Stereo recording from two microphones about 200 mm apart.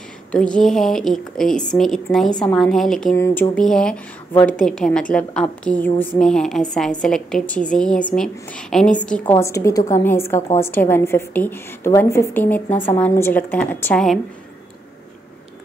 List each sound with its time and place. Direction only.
0.3 s a woman's voice: 5° left (ahead or behind)
9.2 s a woman's voice: 15° left (ahead or behind); by 14.2 s centre (ahead or behind)